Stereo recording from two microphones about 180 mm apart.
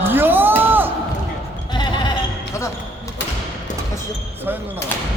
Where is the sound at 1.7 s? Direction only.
25° left (ahead or behind).